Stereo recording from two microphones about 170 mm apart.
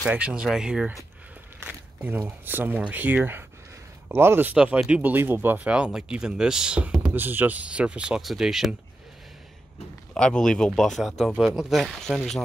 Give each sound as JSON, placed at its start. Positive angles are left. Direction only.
{"t": 0.0, "sound": "speech", "side_deg": -5}
{"t": 10.1, "sound": "speech", "side_deg": 5}